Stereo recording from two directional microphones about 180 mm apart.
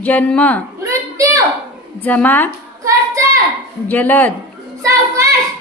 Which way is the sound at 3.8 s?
10° left (ahead or behind).